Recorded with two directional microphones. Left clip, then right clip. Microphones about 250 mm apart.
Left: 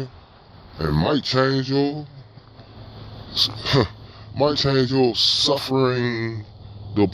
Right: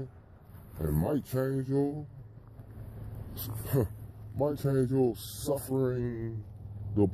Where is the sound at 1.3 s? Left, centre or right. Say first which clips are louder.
Left 13 dB; left.